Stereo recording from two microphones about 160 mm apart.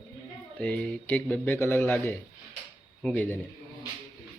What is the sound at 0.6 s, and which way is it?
Speech, 10° left (ahead or behind).